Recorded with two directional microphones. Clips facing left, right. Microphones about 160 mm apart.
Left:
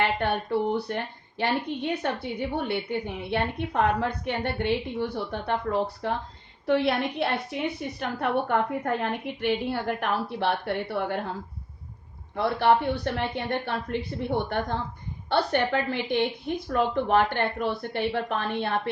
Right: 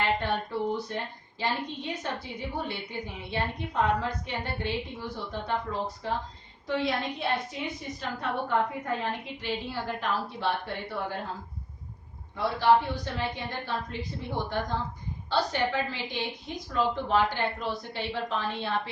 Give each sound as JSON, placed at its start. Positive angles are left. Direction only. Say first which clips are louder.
{"t": 0.2, "sound": "a woman's voice", "louder": "left 4 dB", "side_deg": 65}
{"t": 12.4, "sound": "a woman's voice", "louder": "left 1 dB", "side_deg": 65}